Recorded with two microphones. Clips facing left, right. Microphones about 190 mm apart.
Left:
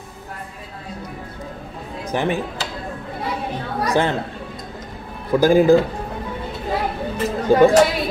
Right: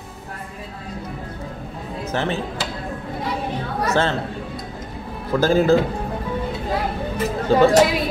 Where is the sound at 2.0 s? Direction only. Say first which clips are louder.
Left 2 dB; 15° left (ahead or behind).